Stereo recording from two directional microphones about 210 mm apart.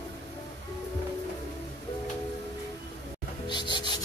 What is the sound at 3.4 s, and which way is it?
Music, 20° left (ahead or behind).